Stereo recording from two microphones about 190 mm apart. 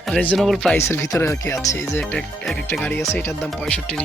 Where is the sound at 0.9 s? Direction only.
15° left (ahead or behind).